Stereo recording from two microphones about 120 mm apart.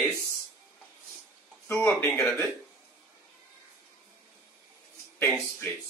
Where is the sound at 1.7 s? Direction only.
20° left (ahead or behind).